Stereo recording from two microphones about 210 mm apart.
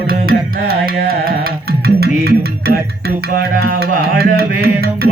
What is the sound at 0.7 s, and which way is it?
Carnatic music, 45° right (ahead or behind).